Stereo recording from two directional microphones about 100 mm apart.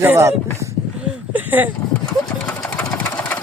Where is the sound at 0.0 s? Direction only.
25° right (ahead or behind).